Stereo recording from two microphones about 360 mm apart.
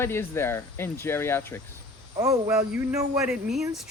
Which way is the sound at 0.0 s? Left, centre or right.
Centre.